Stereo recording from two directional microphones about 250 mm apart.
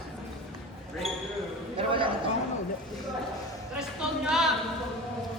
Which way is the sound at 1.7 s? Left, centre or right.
Right.